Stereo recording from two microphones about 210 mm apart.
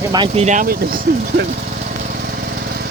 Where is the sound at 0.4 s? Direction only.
40° right (ahead or behind).